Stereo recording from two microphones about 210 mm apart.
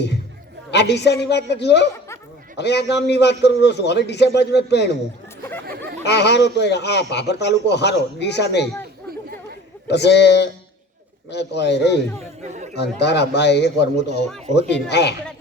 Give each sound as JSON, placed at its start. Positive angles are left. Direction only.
{"t": 0.7, "sound": "a man's voice", "side_deg": 55}
{"t": 5.6, "sound": "a sound", "side_deg": -45}
{"t": 6.0, "sound": "a man's voice", "side_deg": 55}
{"t": 9.8, "sound": "a man's voice", "side_deg": 55}
{"t": 12.4, "sound": "speech", "side_deg": -35}
{"t": 12.7, "sound": "a man's voice", "side_deg": 55}